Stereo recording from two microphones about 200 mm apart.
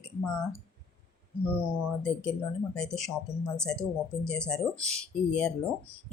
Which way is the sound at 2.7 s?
Centre (ahead or behind).